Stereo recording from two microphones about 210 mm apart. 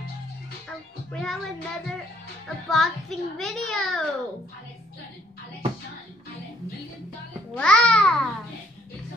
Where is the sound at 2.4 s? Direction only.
Centre (ahead or behind).